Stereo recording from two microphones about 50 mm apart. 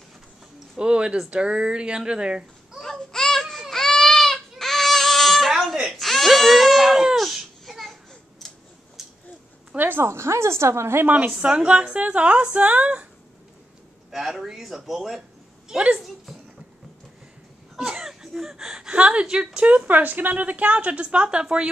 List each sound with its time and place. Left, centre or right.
0.7 s a woman's voice: centre
2.8 s a sound: centre
3.7 s goat: centre
5.5 s baby cry: centre
7.2 s babbling: centre
9.0 s a sound: centre
9.8 s a woman's voice: right
10.0 s a woman's voice: right
11.1 s a woman's voice: right
14.1 s speech: centre
17.7 s a woman's voice: centre
19.9 s a woman's voice: right